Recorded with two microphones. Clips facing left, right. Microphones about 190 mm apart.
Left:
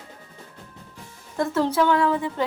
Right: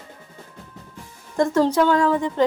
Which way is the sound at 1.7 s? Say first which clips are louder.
Right 2 dB; 5° left (ahead or behind).